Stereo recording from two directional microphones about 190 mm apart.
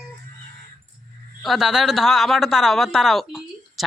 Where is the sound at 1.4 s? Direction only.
Centre (ahead or behind).